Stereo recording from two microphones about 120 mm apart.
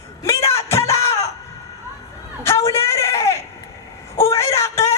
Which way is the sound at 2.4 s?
20° left (ahead or behind).